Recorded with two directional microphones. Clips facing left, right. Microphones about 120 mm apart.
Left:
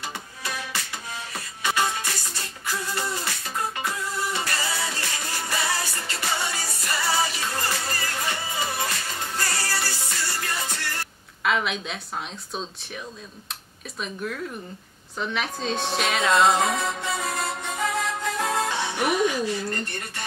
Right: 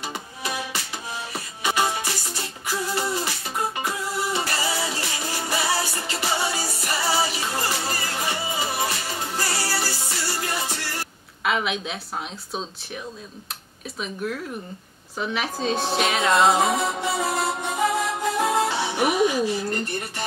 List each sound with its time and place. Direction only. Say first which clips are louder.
0.0 s music: right 3 dB; 15° right (ahead or behind)
11.4 s a woman's voice: right 1 dB; 5° right (ahead or behind)
13.9 s speech: right 2 dB; 5° right (ahead or behind)
15.6 s music: right 4 dB; centre (ahead or behind)